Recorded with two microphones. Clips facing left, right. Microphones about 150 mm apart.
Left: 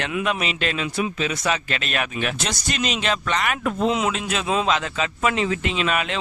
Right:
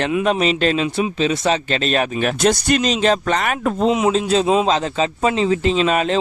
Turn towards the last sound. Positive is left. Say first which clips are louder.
# right 7 dB
turn(degrees=-35)  # may be behind; listen again after turning